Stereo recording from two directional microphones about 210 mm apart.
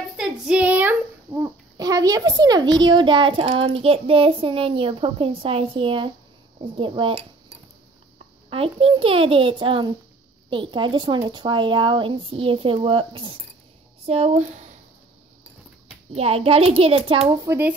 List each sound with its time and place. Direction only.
0.2 s a child's voice: 5° right (ahead or behind); by 14.4 s 30° right (ahead or behind)
16.2 s speech: 30° right (ahead or behind)
17.3 s speech: 15° right (ahead or behind)